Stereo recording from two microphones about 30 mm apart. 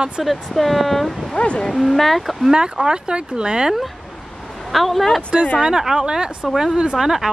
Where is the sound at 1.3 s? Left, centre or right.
Left.